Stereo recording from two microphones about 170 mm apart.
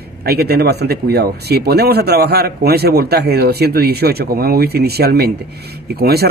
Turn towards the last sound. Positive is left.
turn(degrees=-70)  # may be behind; listen again after turning